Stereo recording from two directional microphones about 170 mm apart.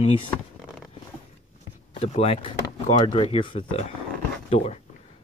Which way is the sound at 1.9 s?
35° left (ahead or behind).